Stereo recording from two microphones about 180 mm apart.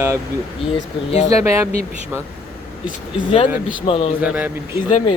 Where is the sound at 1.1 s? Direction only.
35° left (ahead or behind).